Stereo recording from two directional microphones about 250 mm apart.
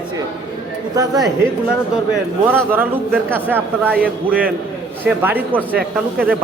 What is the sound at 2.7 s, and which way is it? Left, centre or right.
A man's voice, centre.